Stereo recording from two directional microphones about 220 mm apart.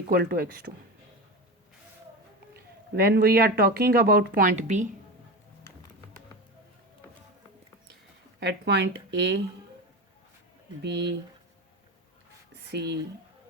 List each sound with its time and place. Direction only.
0.1 s speech: 45° right (ahead or behind)
2.5 s speech: 45° right (ahead or behind)
5.7 s music: 15° left (ahead or behind)
8.4 s speech: 50° right (ahead or behind)
10.8 s speech: 50° right (ahead or behind)
12.7 s speech: 50° right (ahead or behind)